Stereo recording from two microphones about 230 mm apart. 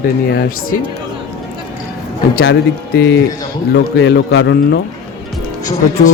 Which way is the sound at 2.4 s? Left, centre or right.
Left.